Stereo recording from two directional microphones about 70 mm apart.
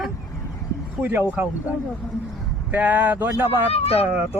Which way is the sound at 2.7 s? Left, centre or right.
Right.